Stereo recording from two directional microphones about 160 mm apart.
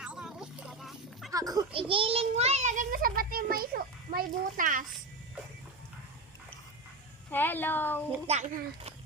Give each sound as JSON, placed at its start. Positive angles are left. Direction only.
{"t": 0.0, "sound": "a sound", "side_deg": -5}
{"t": 1.3, "sound": "a child's voice", "side_deg": -20}
{"t": 1.7, "sound": "a child's voice", "side_deg": -35}
{"t": 7.3, "sound": "speech", "side_deg": 10}
{"t": 8.3, "sound": "a child's voice", "side_deg": -45}